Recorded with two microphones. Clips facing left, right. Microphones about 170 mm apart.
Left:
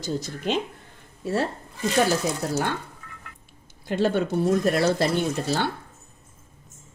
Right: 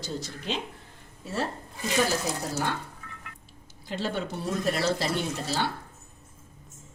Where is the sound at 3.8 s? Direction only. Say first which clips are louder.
Left 8 dB; 55° left (ahead or behind).